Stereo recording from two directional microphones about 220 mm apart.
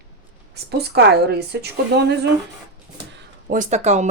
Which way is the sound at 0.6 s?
50° right (ahead or behind).